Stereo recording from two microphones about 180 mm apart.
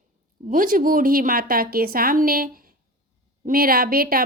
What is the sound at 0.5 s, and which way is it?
A woman's voice, 50° right (ahead or behind).